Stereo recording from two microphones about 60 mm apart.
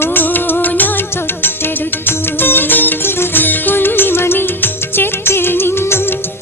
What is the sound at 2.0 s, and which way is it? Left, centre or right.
Music, left.